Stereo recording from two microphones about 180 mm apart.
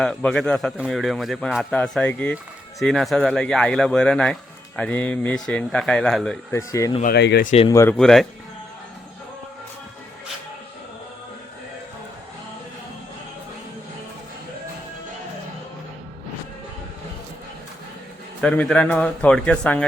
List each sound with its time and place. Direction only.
0.0 s speech: 5° left (ahead or behind)
6.5 s a man's voice: 15° left (ahead or behind)
7.0 s speech: 65° left (ahead or behind)
7.4 s speech: 35° left (ahead or behind)
7.7 s a man's voice: 15° left (ahead or behind)
7.9 s speech: centre (ahead or behind)
18.3 s a man's voice: 5° left (ahead or behind)